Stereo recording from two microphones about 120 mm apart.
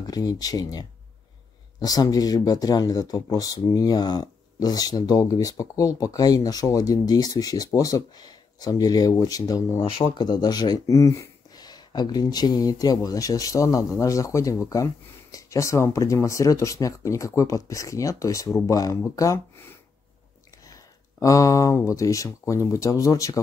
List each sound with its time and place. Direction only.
0.0 s speech: 30° left (ahead or behind)